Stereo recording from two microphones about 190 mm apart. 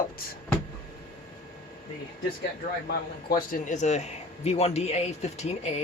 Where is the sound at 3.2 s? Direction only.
45° left (ahead or behind).